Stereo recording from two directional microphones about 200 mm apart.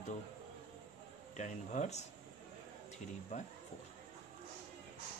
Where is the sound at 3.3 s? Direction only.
35° left (ahead or behind).